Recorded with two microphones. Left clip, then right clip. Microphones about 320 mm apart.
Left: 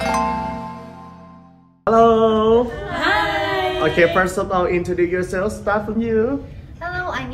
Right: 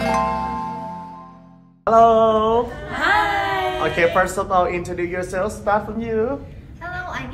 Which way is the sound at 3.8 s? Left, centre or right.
Right.